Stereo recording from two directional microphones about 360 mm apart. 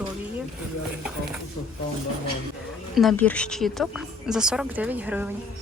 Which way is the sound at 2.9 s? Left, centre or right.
Centre.